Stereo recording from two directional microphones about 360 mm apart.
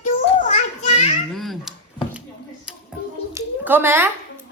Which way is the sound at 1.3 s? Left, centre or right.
Centre.